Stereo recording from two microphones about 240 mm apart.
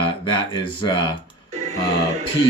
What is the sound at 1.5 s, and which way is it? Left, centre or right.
Music, right.